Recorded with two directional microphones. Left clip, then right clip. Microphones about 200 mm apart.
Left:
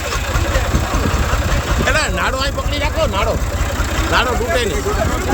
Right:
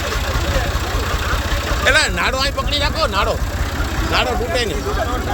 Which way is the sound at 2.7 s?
15° right (ahead or behind).